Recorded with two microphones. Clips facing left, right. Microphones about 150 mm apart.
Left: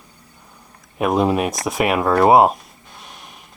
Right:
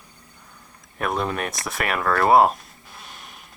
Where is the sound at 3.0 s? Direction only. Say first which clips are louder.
Left 3 dB; centre (ahead or behind).